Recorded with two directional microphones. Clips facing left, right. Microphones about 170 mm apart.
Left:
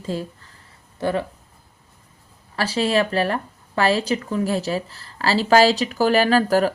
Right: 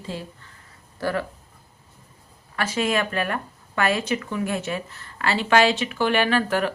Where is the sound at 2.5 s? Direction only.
35° left (ahead or behind).